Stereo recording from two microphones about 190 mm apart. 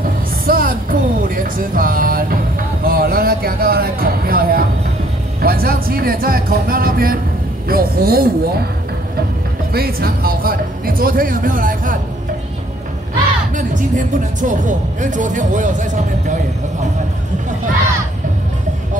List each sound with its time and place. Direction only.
0.5 s music: 50° right (ahead or behind)
2.8 s a sound: 50° right (ahead or behind)
5.4 s speech: 50° right (ahead or behind)
9.7 s speech: 55° right (ahead or behind)
13.6 s speech: 40° right (ahead or behind)